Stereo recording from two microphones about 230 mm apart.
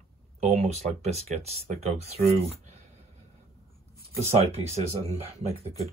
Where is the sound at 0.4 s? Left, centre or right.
Right.